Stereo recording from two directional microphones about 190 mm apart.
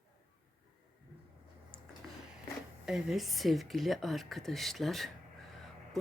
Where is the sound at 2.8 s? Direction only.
Centre (ahead or behind).